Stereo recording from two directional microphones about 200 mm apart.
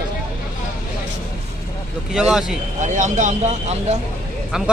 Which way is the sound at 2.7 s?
35° right (ahead or behind).